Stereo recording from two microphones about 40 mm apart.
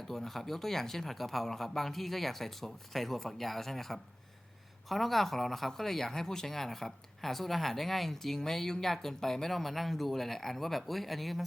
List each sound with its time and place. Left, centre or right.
0.1 s speech: centre